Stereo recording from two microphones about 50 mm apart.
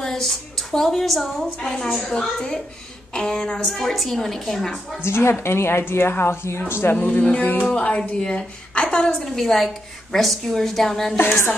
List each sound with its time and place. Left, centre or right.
0.0 s a woman's voice: centre
3.6 s a woman's voice: centre
5.0 s a woman's voice: left
6.7 s speech: left
7.6 s a woman's voice: left
9.2 s a woman's voice: centre
11.1 s a woman's voice: left